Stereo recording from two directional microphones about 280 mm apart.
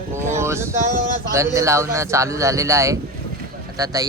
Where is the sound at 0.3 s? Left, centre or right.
Centre.